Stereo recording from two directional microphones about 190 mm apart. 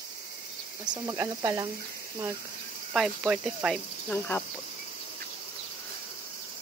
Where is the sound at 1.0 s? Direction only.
15° right (ahead or behind).